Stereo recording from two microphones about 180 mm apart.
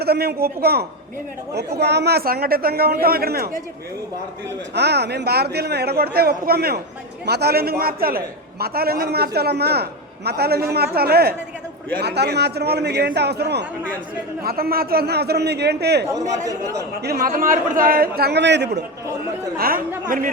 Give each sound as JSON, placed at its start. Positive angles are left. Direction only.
{"t": 0.0, "sound": "a man's voice", "side_deg": -60}
{"t": 4.7, "sound": "a man's voice", "side_deg": -65}
{"t": 14.4, "sound": "a man's voice", "side_deg": -55}
{"t": 16.1, "sound": "speech", "side_deg": -20}
{"t": 17.0, "sound": "a man's voice", "side_deg": -55}
{"t": 19.5, "sound": "a man's voice", "side_deg": -55}